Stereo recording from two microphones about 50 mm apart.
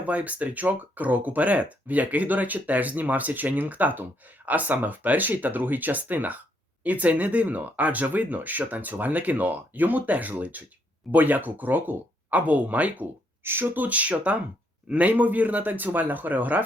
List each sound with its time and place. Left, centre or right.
0.0 s speech: right
13.4 s speech: right